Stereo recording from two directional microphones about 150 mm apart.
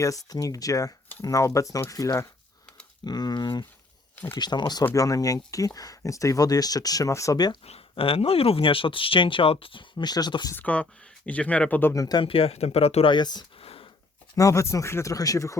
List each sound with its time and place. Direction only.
0.0 s speech: 25° left (ahead or behind)
4.1 s a sound: 15° left (ahead or behind)
4.4 s speech: 30° left (ahead or behind)
7.6 s speech: 40° left (ahead or behind)
10.5 s speech: 10° left (ahead or behind)
12.0 s speech: 30° left (ahead or behind)